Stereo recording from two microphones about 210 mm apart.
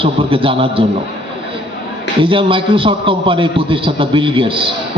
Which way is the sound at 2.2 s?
25° right (ahead or behind).